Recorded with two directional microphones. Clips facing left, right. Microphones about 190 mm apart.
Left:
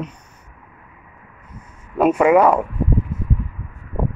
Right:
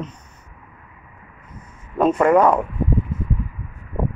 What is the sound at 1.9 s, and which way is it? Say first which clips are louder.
Speech: left 1 dB; 10° left (ahead or behind).